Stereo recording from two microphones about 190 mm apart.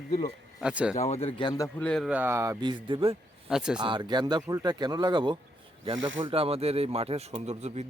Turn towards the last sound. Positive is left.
turn(degrees=-35)  # may be behind; listen again after turning